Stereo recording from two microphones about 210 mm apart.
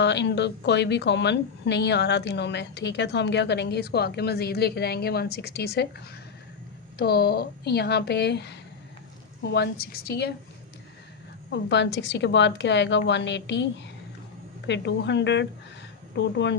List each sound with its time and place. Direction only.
0.0 s a woman's voice: 55° left (ahead or behind)
7.0 s a woman's voice: 50° left (ahead or behind)
11.5 s a woman's voice: 55° left (ahead or behind)